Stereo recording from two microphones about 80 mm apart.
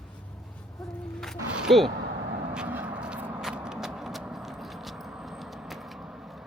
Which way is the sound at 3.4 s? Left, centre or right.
Centre.